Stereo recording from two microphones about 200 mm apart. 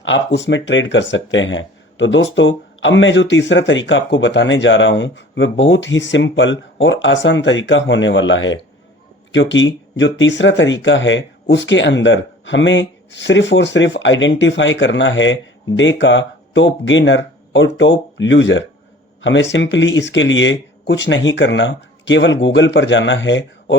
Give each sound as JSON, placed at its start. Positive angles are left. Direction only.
{"t": 0.0, "sound": "speech", "side_deg": 65}